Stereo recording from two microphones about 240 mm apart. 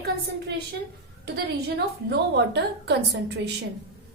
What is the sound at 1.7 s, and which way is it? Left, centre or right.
Speech, right.